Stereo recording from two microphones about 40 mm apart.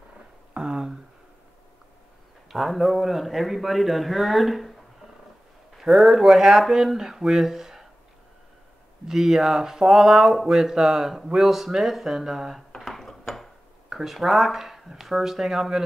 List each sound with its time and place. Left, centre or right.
0.6 s a sound: centre
2.5 s a man's voice: centre
5.8 s a man's voice: centre
9.0 s speech: centre
12.7 s dishes: centre
13.8 s speech: centre